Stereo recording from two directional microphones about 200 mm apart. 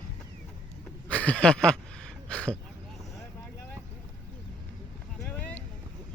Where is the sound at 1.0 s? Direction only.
5° left (ahead or behind).